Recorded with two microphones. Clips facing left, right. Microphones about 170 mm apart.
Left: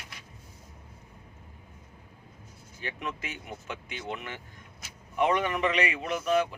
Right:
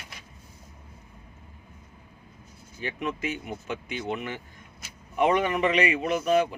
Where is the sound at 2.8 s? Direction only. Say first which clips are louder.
Right 6 dB; 15° right (ahead or behind).